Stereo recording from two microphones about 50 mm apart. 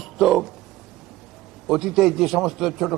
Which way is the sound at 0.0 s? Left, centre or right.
Centre.